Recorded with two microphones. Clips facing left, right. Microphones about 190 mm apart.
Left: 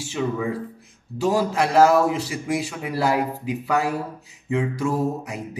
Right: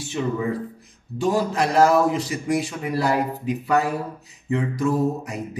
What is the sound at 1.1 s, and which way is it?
Speech, 75° left (ahead or behind).